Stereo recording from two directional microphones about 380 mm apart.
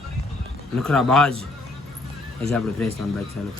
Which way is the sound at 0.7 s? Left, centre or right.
Centre.